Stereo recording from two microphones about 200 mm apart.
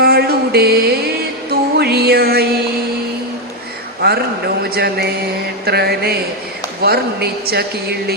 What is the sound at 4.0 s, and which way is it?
Speech, 55° right (ahead or behind).